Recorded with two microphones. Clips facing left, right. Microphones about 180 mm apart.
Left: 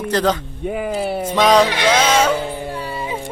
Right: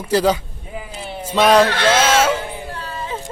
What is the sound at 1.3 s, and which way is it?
Speech, 10° right (ahead or behind).